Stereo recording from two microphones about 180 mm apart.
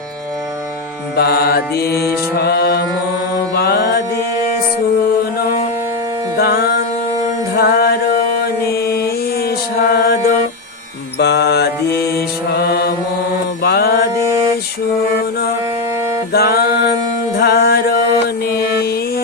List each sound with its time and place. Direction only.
1.1 s mantra: 60° left (ahead or behind)
3.5 s music: 60° left (ahead or behind)
5.4 s music: 50° left (ahead or behind)
8.7 s mantra: 60° left (ahead or behind)
11.2 s mantra: 70° left (ahead or behind)
13.6 s mantra: 60° left (ahead or behind)
16.3 s music: 60° left (ahead or behind)